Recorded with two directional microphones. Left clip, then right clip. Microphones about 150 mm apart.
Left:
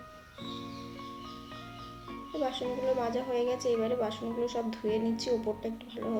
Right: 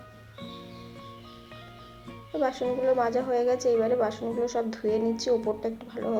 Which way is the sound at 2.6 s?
Centre (ahead or behind).